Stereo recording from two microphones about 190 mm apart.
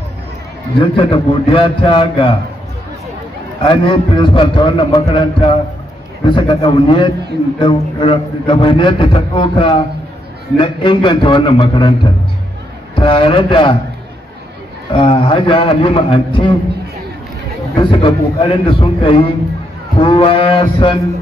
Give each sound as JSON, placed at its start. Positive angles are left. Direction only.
{"t": 0.7, "sound": "a man's voice", "side_deg": 30}
{"t": 3.6, "sound": "a man's voice", "side_deg": 25}
{"t": 14.9, "sound": "a man's voice", "side_deg": 30}
{"t": 17.7, "sound": "a man's voice", "side_deg": 25}